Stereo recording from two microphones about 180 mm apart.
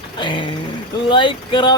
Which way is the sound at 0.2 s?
25° left (ahead or behind).